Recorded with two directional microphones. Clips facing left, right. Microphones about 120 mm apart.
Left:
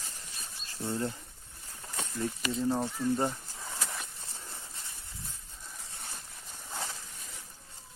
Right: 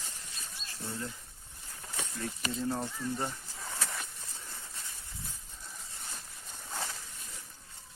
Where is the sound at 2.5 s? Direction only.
20° left (ahead or behind).